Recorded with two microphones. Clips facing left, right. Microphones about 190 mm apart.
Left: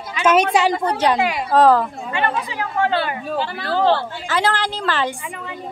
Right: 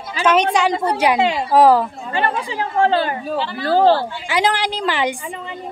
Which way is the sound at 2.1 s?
30° right (ahead or behind).